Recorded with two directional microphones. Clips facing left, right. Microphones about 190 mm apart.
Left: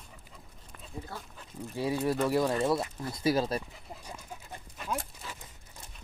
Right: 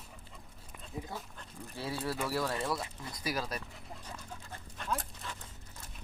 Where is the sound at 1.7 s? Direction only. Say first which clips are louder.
Left 7 dB; 15° left (ahead or behind).